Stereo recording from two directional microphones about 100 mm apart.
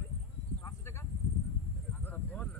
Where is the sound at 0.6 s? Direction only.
25° left (ahead or behind).